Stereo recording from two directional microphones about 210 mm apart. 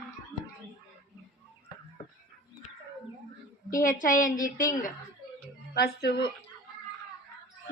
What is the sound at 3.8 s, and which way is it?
Speech, 40° left (ahead or behind).